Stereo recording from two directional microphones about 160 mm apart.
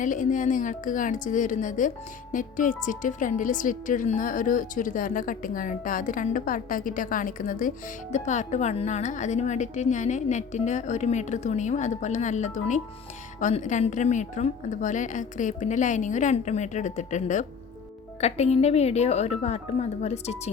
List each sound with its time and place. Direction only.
0.0 s speech: 55° left (ahead or behind)